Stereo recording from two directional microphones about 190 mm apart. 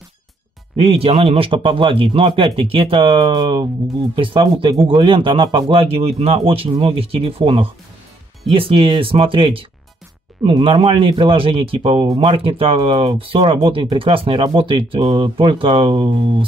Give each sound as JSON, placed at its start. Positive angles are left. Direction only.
{"t": 0.8, "sound": "speech", "side_deg": -30}